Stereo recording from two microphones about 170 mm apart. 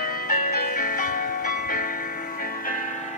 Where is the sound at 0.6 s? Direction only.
55° left (ahead or behind).